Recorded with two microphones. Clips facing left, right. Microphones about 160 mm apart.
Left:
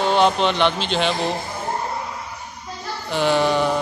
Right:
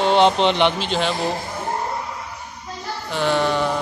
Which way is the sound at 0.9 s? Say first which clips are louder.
Left 1 dB; 5° right (ahead or behind).